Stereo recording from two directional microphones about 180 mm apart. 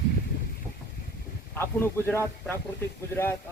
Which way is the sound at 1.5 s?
10° left (ahead or behind).